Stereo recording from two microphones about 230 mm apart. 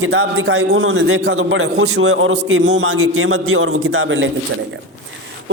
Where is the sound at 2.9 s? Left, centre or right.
Right.